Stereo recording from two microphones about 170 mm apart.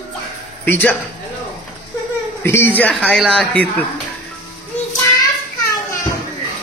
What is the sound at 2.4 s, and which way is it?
A man's voice, 15° left (ahead or behind).